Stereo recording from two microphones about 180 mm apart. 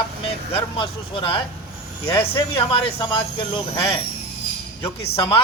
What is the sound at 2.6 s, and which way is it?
A man's voice, 30° left (ahead or behind).